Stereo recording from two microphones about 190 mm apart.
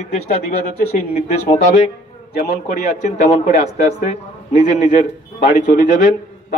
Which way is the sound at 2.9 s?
40° left (ahead or behind).